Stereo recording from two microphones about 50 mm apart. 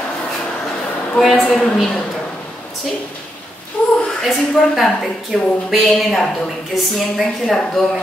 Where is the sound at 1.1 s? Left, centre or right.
Centre.